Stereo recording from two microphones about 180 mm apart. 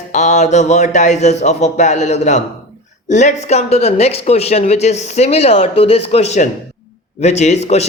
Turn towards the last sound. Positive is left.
turn(degrees=40)  # may be behind; listen again after turning